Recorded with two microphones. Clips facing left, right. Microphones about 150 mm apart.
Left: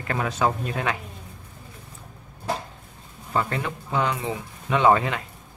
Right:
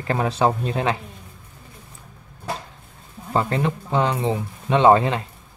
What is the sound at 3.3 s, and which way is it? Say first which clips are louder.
Speech: right 4 dB; 30° right (ahead or behind).